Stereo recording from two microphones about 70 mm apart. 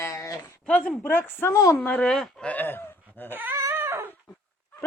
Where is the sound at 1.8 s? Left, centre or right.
Left.